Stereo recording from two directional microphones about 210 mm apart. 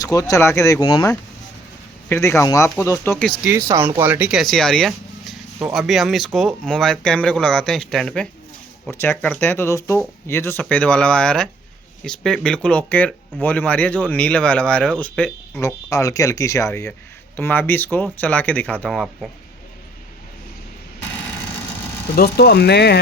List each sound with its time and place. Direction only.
0.0 s speech: 15° left (ahead or behind)
3.7 s speech: 15° right (ahead or behind); by 19.3 s centre (ahead or behind)
22.1 s speech: 50° left (ahead or behind)